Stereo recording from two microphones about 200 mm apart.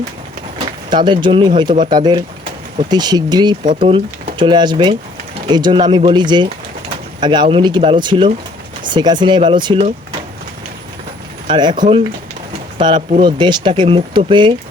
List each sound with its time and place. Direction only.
0.9 s speech: 25° right (ahead or behind)
11.4 s speech: 25° right (ahead or behind)